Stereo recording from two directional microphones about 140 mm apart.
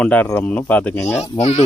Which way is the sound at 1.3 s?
50° left (ahead or behind).